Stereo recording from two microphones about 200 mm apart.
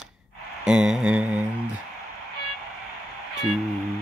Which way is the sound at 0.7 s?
5° right (ahead or behind).